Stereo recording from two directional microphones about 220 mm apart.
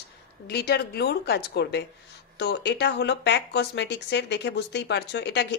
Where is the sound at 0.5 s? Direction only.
45° left (ahead or behind).